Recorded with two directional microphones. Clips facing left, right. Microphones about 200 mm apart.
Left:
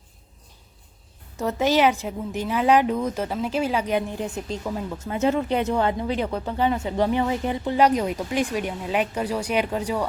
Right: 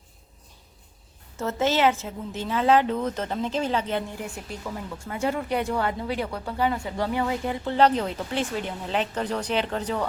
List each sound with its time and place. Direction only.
1.4 s a woman's voice: 15° left (ahead or behind)